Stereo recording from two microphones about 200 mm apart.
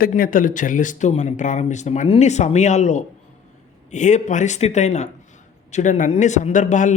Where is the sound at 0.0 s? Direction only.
45° left (ahead or behind).